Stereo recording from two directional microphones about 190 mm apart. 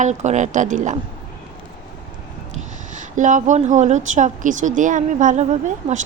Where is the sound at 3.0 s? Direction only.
40° right (ahead or behind).